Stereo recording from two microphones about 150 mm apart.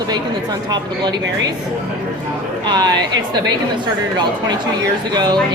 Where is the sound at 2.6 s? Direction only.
30° right (ahead or behind).